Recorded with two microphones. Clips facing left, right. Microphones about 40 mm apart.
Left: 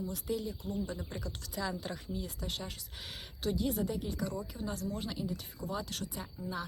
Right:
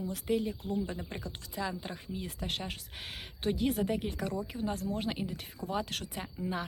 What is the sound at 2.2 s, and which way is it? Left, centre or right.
Speech, right.